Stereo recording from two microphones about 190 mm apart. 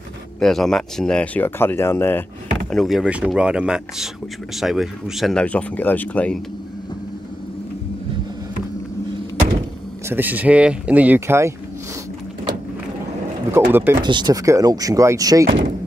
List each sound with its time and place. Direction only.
0.4 s speech: centre (ahead or behind)
2.7 s speech: centre (ahead or behind)
10.0 s speech: 10° right (ahead or behind)
13.5 s speech: 10° right (ahead or behind)
14.0 s speech: 20° right (ahead or behind)